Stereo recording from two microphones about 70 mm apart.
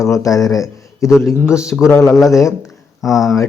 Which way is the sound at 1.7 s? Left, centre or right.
Centre.